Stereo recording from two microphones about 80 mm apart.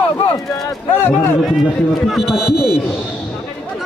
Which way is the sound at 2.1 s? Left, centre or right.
Centre.